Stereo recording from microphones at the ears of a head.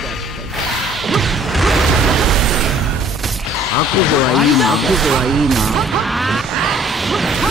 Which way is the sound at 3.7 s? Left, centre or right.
Left.